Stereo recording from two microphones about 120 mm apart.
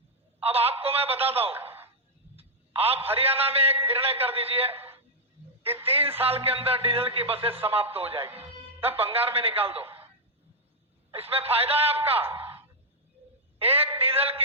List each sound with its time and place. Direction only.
0.4 s speech: 55° right (ahead or behind)
2.3 s telephone: 55° right (ahead or behind)
3.1 s speech: 55° right (ahead or behind)
4.7 s a sound: 15° right (ahead or behind)
5.8 s music: 55° right (ahead or behind)
6.1 s a man's voice: 55° right (ahead or behind)
11.1 s speech: 55° right (ahead or behind)
12.2 s speech: 20° right (ahead or behind)
13.6 s speech: 55° right (ahead or behind)